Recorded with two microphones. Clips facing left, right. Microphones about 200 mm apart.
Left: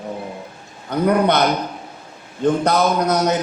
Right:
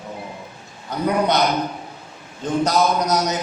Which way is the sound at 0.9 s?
60° left (ahead or behind).